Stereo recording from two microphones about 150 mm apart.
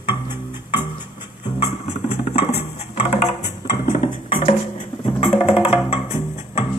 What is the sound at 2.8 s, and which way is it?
Music, 50° left (ahead or behind).